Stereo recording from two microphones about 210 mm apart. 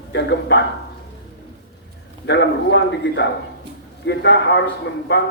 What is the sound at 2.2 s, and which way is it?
A man's voice, 55° left (ahead or behind).